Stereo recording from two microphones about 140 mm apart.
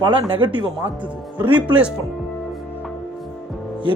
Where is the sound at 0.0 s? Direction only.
35° right (ahead or behind).